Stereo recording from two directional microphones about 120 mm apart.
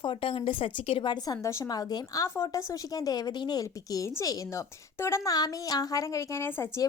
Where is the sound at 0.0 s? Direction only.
45° left (ahead or behind).